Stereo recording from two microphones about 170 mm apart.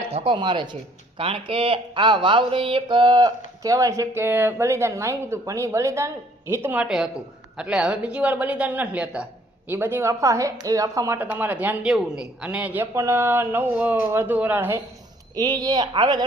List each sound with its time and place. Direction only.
0.1 s speech: 35° right (ahead or behind); by 14.8 s 10° right (ahead or behind)
15.4 s speech: 25° right (ahead or behind)